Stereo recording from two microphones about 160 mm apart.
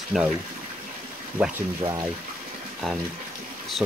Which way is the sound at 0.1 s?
Centre (ahead or behind).